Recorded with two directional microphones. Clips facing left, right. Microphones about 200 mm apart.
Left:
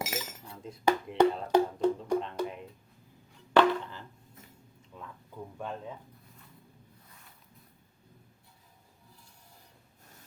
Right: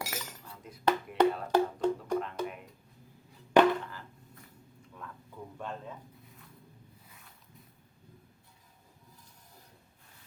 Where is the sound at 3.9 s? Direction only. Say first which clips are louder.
Left 1 dB; 20° left (ahead or behind).